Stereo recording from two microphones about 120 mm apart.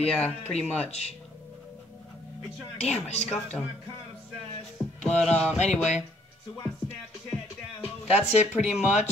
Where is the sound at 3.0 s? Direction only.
65° left (ahead or behind).